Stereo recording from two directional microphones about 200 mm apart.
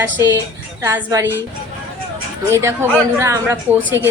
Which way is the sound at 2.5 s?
15° right (ahead or behind).